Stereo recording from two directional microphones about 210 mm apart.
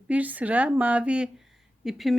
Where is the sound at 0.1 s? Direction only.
5° right (ahead or behind).